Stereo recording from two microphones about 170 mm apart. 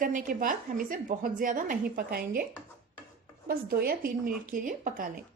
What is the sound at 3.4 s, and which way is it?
Speech, 60° right (ahead or behind).